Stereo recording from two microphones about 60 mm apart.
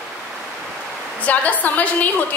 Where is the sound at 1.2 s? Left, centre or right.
Left.